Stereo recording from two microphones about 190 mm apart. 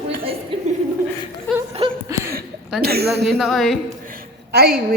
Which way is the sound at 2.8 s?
55° right (ahead or behind).